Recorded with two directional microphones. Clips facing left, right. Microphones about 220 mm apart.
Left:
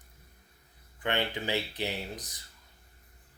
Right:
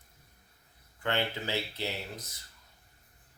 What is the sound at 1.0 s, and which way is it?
Speech, 15° left (ahead or behind).